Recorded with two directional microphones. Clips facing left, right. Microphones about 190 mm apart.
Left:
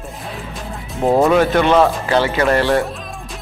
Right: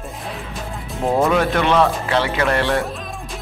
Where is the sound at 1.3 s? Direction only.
Centre (ahead or behind).